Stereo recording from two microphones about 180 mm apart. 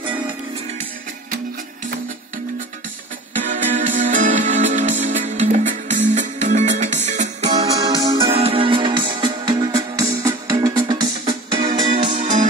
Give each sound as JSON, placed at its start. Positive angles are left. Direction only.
{"t": 3.4, "sound": "music", "side_deg": -45}
{"t": 7.5, "sound": "music", "side_deg": -20}
{"t": 12.1, "sound": "music", "side_deg": -40}